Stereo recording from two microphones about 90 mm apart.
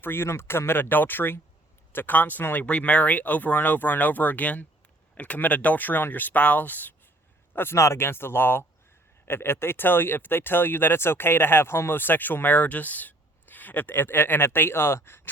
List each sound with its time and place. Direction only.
0.0 s speech: 25° left (ahead or behind)